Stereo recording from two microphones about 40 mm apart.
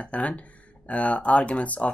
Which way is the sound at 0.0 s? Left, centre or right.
Left.